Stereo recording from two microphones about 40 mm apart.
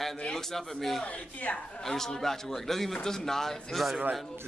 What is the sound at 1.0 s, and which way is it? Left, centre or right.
Speech, left.